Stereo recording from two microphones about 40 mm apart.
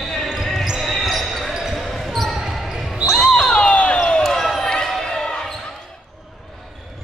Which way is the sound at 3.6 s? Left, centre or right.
Left.